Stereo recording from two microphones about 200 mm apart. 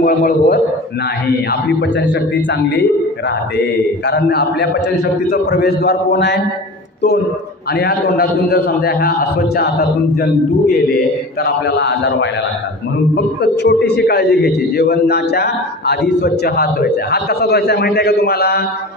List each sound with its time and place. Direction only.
0.0 s a man's voice: 50° left (ahead or behind)
4.1 s a man's voice: 55° left (ahead or behind)
7.7 s a man's voice: 50° left (ahead or behind)